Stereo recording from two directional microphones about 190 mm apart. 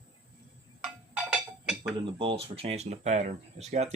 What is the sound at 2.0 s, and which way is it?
Speech, 30° right (ahead or behind).